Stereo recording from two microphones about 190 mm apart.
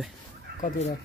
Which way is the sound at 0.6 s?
45° left (ahead or behind).